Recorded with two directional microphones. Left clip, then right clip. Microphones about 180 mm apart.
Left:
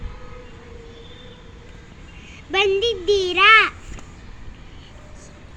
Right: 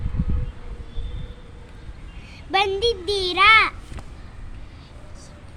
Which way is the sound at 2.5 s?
25° right (ahead or behind).